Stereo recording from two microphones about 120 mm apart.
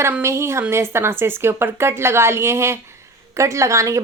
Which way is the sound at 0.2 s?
25° right (ahead or behind).